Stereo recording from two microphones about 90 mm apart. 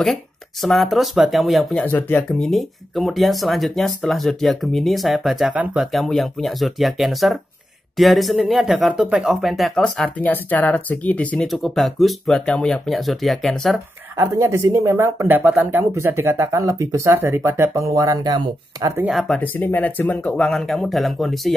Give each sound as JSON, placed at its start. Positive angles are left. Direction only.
{"t": 0.0, "sound": "speech", "side_deg": 5}
{"t": 1.9, "sound": "speech", "side_deg": 20}
{"t": 2.2, "sound": "speech", "side_deg": 5}
{"t": 10.1, "sound": "speech", "side_deg": 15}
{"t": 11.4, "sound": "speech", "side_deg": 0}
{"t": 14.1, "sound": "speech", "side_deg": -30}
{"t": 16.5, "sound": "speech", "side_deg": -40}
{"t": 17.1, "sound": "speech", "side_deg": -25}
{"t": 19.0, "sound": "speech", "side_deg": 0}
{"t": 19.4, "sound": "speech", "side_deg": 20}